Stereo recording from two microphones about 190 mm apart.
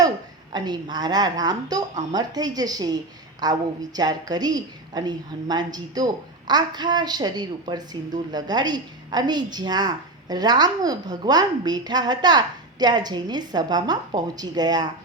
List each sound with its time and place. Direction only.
0.5 s a woman's voice: 20° right (ahead or behind)